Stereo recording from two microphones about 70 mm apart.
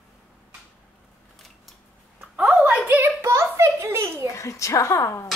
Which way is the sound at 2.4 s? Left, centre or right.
Centre.